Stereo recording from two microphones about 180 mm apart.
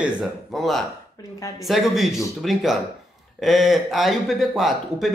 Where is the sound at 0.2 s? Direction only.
Centre (ahead or behind).